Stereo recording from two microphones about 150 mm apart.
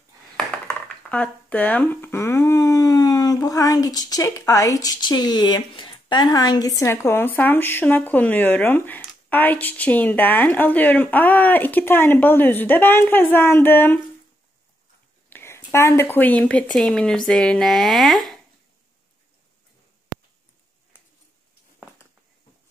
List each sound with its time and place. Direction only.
1.1 s speech: 10° left (ahead or behind)
15.2 s speech: 15° left (ahead or behind)